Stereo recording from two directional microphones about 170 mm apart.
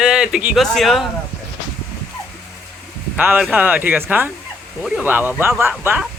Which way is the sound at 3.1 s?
10° right (ahead or behind).